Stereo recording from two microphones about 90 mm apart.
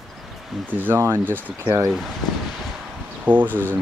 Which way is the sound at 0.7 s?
20° right (ahead or behind).